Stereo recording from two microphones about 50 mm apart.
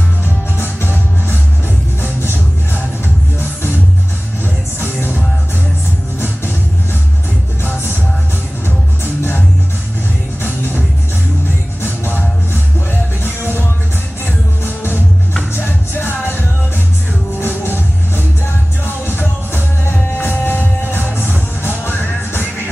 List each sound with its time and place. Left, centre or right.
0.6 s music: left
2.0 s music: left
4.7 s music: left
6.1 s music: left
8.6 s music: left
11.8 s music: left
13.2 s music: left